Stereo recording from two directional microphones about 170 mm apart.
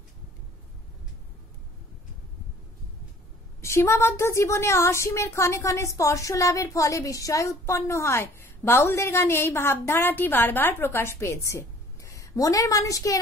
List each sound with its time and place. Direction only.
3.6 s a woman's voice: 15° left (ahead or behind)